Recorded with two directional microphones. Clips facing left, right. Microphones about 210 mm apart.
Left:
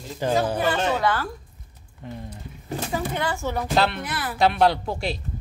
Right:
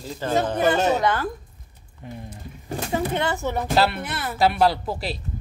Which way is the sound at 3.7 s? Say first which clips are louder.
Right 1 dB; 5° right (ahead or behind).